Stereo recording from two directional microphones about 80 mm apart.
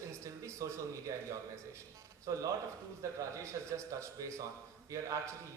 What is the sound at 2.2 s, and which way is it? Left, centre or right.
A man's voice, right.